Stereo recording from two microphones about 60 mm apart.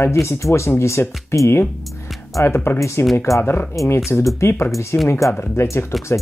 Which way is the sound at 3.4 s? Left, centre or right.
Left.